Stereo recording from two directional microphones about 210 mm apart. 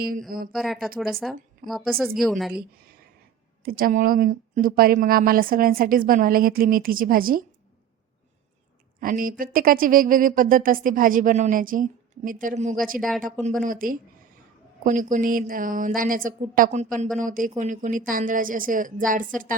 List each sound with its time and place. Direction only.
0.0 s a woman's voice: 45° right (ahead or behind)
0.5 s a woman's voice: centre (ahead or behind)
3.6 s a woman's voice: 45° right (ahead or behind)
9.0 s speech: 40° right (ahead or behind)
13.0 s a woman's voice: centre (ahead or behind)
13.4 s speech: 40° right (ahead or behind)